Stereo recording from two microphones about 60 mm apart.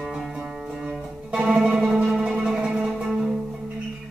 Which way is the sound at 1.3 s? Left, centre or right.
Centre.